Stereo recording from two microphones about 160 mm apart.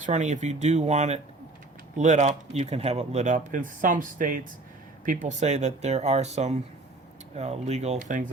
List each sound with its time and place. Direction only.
0.0 s speech: 50° right (ahead or behind)